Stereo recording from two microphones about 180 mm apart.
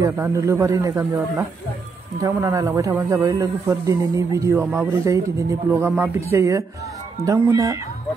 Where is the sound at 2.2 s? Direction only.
15° right (ahead or behind).